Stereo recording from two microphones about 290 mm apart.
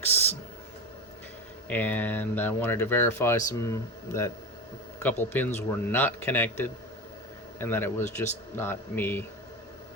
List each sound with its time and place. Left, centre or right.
1.7 s speech: centre